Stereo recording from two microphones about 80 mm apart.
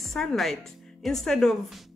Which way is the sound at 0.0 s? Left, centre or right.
Centre.